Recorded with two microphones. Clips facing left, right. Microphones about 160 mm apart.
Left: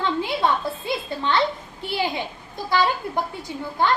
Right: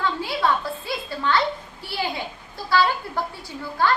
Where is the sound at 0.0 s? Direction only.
20° left (ahead or behind).